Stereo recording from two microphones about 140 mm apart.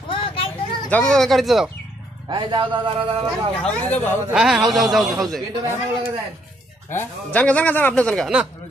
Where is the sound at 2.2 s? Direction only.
35° right (ahead or behind).